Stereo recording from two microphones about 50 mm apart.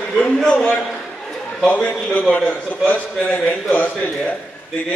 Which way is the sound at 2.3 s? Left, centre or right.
Left.